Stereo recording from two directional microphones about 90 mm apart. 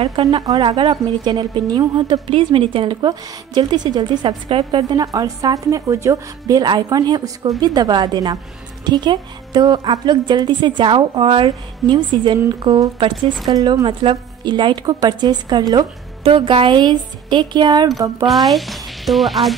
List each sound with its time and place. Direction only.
0.2 s a woman's voice: 45° right (ahead or behind)
0.6 s a woman's voice: 65° right (ahead or behind)
2.2 s speech: 85° right
3.1 s a woman's voice: 50° right (ahead or behind)
4.5 s a woman's voice: 80° right
4.8 s a woman's voice: 45° right (ahead or behind)
16.3 s a woman's voice: 70° right (ahead or behind); by 18.1 s 45° right (ahead or behind)
18.5 s speech: centre (ahead or behind)